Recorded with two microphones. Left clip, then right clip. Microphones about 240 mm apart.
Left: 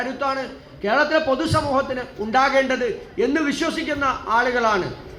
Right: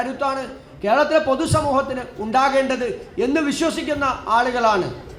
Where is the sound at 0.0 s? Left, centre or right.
Right.